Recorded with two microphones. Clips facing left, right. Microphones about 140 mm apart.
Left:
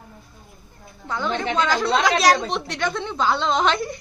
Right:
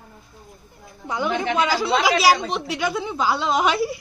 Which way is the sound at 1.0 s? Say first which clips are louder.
Right 1 dB; 15° right (ahead or behind).